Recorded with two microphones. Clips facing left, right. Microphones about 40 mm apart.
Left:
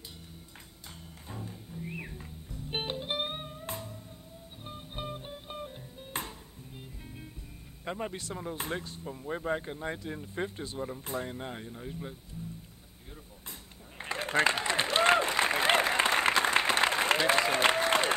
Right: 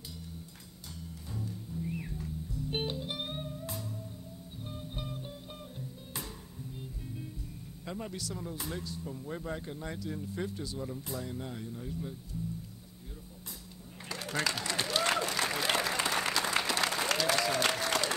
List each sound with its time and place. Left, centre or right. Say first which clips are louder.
1.3 s music: right 2 dB; left
7.8 s speech: left 4 dB; left
14.0 s applause: left 6 dB; left